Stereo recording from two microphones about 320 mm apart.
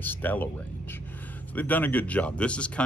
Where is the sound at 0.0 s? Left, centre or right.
Centre.